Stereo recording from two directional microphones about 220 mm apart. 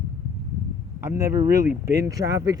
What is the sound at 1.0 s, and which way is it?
Speech, 10° right (ahead or behind).